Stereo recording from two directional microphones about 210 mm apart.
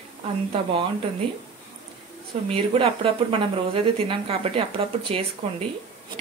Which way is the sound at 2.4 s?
25° right (ahead or behind).